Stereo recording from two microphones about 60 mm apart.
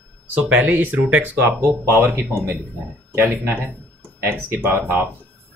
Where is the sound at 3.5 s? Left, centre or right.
Right.